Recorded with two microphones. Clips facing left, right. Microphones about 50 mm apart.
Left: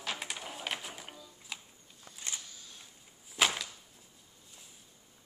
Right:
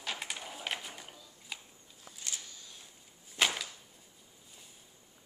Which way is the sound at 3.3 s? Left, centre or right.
Centre.